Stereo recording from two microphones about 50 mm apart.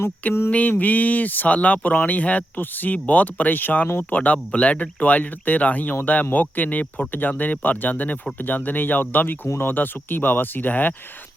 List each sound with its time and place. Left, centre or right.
0.5 s speech: left